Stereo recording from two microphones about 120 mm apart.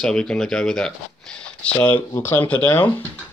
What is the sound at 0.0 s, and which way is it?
Speech, 5° left (ahead or behind).